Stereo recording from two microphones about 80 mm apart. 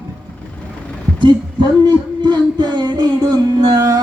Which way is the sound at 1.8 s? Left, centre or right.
Right.